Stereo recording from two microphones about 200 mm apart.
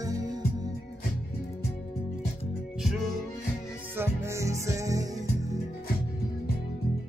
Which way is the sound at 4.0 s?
15° right (ahead or behind).